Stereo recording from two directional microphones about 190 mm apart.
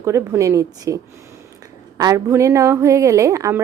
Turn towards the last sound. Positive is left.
turn(degrees=-15)  # may be behind; listen again after turning